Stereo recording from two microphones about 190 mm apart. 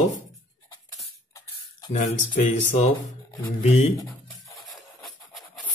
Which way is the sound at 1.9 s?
40° left (ahead or behind).